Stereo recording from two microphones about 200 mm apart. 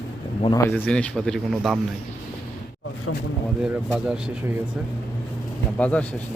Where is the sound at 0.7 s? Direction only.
5° left (ahead or behind).